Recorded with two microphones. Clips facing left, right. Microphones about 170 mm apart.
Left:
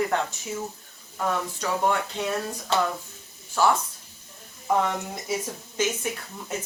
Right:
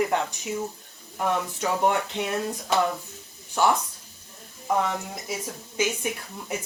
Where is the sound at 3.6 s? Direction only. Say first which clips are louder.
Even; 20° right (ahead or behind).